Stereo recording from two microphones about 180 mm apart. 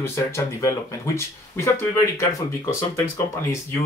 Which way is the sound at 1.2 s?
15° left (ahead or behind).